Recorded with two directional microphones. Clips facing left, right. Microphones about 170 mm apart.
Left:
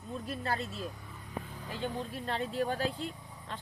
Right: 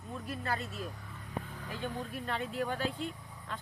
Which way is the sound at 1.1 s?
10° left (ahead or behind).